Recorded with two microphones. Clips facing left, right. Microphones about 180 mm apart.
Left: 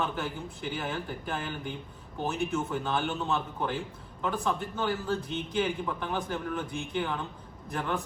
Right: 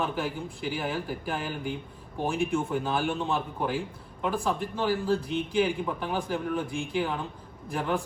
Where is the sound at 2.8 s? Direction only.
5° right (ahead or behind).